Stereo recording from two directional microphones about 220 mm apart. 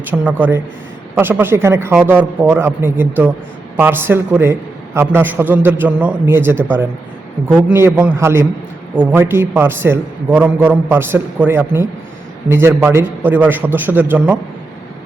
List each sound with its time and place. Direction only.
0.0 s a man's voice: 10° right (ahead or behind)
7.7 s a man's voice: 10° right (ahead or behind)